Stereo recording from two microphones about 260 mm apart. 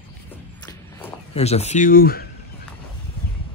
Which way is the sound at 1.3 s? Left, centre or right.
Left.